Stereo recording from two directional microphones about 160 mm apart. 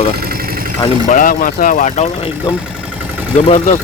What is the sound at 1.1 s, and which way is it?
Speech, 60° left (ahead or behind).